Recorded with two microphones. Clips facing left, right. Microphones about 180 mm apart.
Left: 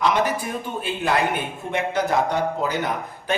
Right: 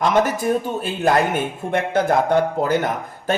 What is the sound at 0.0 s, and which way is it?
Speech, 45° right (ahead or behind).